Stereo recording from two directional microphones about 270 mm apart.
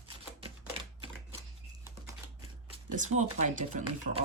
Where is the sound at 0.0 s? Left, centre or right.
Centre.